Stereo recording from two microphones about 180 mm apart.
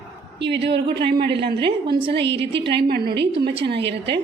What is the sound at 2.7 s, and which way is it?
Speech, 60° right (ahead or behind).